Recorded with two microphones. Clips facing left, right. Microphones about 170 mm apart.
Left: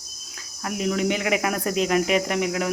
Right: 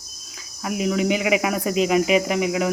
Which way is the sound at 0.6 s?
5° right (ahead or behind).